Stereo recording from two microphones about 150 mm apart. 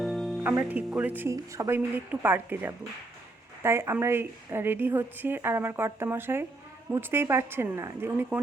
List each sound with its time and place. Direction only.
0.0 s music: centre (ahead or behind)
0.4 s a woman's voice: 10° right (ahead or behind)